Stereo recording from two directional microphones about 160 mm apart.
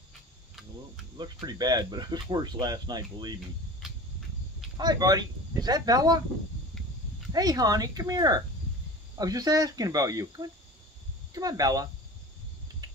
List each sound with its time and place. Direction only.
1.1 s speech: 25° right (ahead or behind)
4.7 s speech: 25° right (ahead or behind)
7.3 s speech: 25° right (ahead or behind)